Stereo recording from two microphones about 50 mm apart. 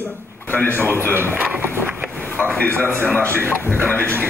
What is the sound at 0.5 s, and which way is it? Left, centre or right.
Speech, left.